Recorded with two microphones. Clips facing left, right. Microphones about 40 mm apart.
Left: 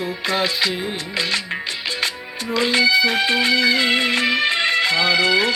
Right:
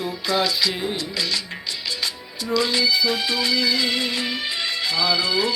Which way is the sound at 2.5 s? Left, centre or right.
Left.